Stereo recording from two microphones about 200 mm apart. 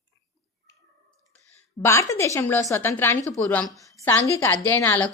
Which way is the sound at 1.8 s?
15° left (ahead or behind).